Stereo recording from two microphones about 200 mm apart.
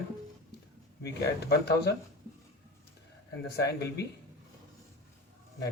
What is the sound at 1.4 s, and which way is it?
Speech, 55° left (ahead or behind).